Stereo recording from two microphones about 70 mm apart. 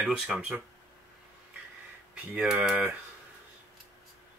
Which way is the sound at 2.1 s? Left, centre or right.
Centre.